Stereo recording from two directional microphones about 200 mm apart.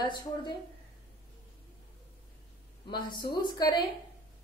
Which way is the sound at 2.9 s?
25° left (ahead or behind).